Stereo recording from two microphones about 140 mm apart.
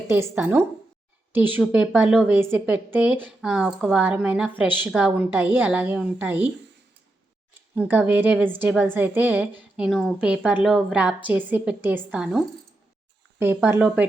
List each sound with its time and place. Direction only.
0.1 s a woman's voice: 15° right (ahead or behind)
7.8 s a woman's voice: 15° right (ahead or behind)
9.7 s a woman's voice: 5° right (ahead or behind)
13.4 s a woman's voice: 15° right (ahead or behind)